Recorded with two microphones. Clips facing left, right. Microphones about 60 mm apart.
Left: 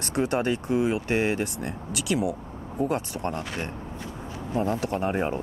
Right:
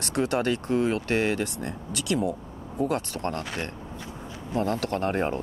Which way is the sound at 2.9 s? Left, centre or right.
Centre.